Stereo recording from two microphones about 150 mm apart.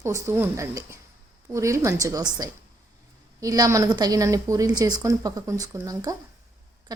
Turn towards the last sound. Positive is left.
turn(degrees=-25)  # may be behind; listen again after turning